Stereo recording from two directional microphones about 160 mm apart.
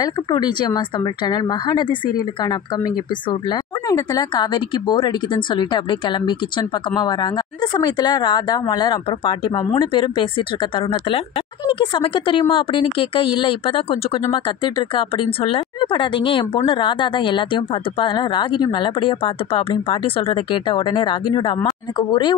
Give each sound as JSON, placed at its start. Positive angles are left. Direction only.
{"t": 0.0, "sound": "a woman's voice", "side_deg": 30}